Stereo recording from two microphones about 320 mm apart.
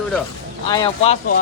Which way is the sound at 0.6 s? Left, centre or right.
Centre.